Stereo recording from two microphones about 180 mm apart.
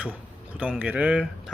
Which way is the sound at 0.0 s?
5° right (ahead or behind).